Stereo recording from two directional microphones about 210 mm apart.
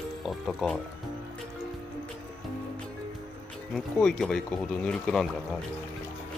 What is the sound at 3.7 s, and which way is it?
Speech, centre (ahead or behind).